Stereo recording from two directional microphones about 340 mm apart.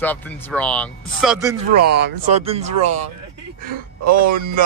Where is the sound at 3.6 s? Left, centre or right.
Right.